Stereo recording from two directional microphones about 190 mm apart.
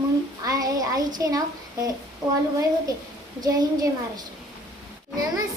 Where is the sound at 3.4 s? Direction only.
20° right (ahead or behind).